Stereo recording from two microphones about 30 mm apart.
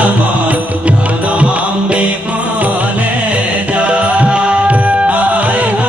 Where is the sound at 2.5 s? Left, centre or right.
Right.